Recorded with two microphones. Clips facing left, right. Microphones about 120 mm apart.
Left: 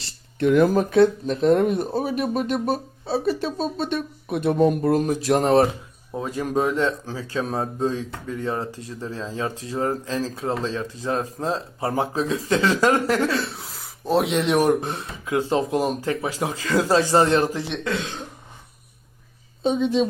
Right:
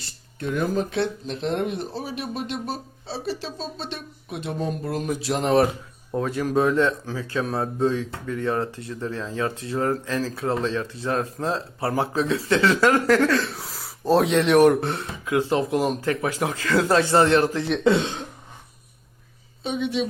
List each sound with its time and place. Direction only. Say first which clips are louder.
0.3 s speech: left 8 dB; 75° left (ahead or behind)
0.8 s speech: left 8 dB; 45° left (ahead or behind); by 12.0 s 20° left (ahead or behind)
12.1 s speech: right 1 dB; 35° left (ahead or behind)
13.5 s a sound: right 2 dB; centre (ahead or behind)
14.4 s speech: right 3 dB; 30° left (ahead or behind)
17.8 s speech: right 10 dB; 30° right (ahead or behind)
19.6 s speech: left 5 dB; 35° left (ahead or behind)